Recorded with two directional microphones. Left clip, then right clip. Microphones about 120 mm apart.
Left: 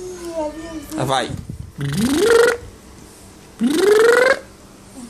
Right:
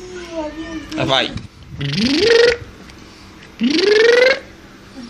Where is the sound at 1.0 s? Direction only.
30° left (ahead or behind).